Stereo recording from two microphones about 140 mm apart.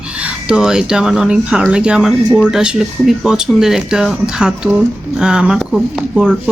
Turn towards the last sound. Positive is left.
turn(degrees=-5)  # may be behind; listen again after turning